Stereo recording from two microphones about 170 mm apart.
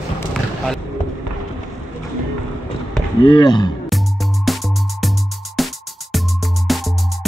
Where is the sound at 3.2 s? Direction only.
30° left (ahead or behind).